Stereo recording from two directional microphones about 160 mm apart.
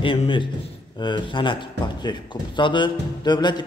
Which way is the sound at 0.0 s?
35° left (ahead or behind).